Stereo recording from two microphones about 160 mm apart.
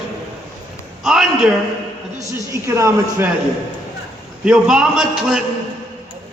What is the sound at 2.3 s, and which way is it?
Speech, 20° right (ahead or behind).